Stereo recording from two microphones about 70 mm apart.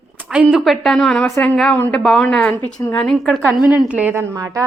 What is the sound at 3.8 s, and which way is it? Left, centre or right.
Speech, centre.